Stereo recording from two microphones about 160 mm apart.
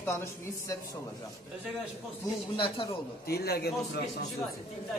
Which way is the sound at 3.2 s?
80° left.